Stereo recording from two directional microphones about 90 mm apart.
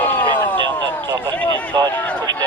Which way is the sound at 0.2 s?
20° left (ahead or behind).